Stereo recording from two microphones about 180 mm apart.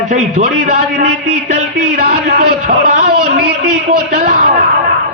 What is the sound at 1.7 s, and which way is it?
A man's voice, 65° right (ahead or behind).